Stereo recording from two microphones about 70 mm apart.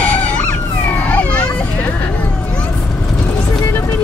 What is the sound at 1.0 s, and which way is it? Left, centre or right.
Children playing, left.